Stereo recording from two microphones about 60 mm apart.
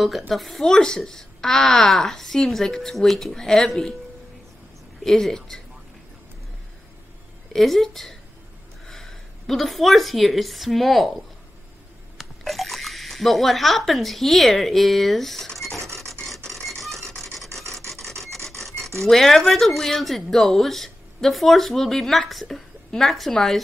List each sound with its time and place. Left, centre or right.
0.3 s a woman's voice: centre
5.0 s a woman's voice: centre
7.5 s a woman's voice: centre
12.2 s speech: centre
15.8 s filing: right
16.4 s a sound: centre
17.1 s rub: centre
17.7 s filing: centre
18.6 s speech: centre